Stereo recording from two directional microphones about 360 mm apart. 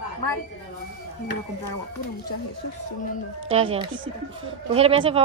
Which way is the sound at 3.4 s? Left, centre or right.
Centre.